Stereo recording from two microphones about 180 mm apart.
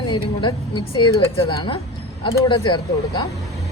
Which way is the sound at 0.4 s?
25° left (ahead or behind).